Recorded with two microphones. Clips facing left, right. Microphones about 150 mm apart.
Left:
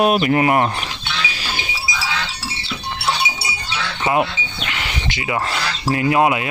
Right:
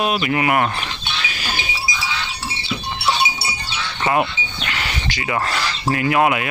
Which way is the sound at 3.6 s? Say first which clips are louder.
Left 2 dB; 90° left.